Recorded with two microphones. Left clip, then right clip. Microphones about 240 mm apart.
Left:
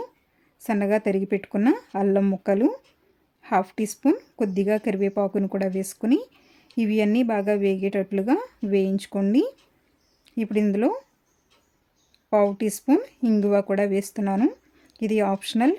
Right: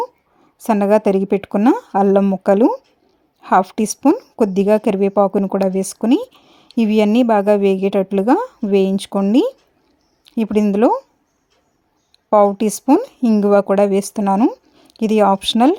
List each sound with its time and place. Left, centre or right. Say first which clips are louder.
0.6 s a woman's voice: right 9 dB; right
6.4 s a sound: right 8 dB; right
7.3 s speech: right 9 dB; right
12.5 s speech: right 8 dB; right
13.0 s speech: right 7 dB; centre
13.3 s speech: right 9 dB; right